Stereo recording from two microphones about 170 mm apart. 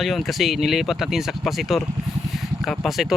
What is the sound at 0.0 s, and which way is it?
Speech, centre (ahead or behind).